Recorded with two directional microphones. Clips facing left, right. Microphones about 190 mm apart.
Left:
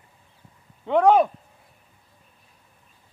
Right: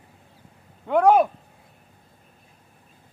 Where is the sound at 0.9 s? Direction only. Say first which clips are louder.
Even; 5° right (ahead or behind).